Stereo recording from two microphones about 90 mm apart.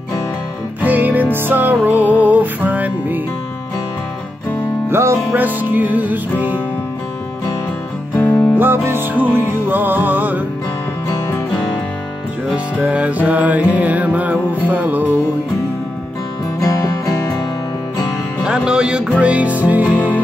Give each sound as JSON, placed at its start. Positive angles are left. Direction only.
{"t": 0.7, "sound": "music", "side_deg": -20}
{"t": 4.8, "sound": "music", "side_deg": -25}
{"t": 8.2, "sound": "music", "side_deg": 20}
{"t": 8.5, "sound": "music", "side_deg": -25}
{"t": 11.2, "sound": "music", "side_deg": 25}
{"t": 12.5, "sound": "music", "side_deg": -15}
{"t": 16.6, "sound": "music", "side_deg": 45}
{"t": 18.4, "sound": "music", "side_deg": -10}